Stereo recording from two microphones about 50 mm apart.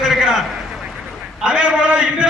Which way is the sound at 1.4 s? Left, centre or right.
Right.